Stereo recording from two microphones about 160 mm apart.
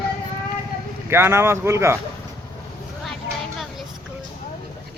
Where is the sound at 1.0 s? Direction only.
15° right (ahead or behind).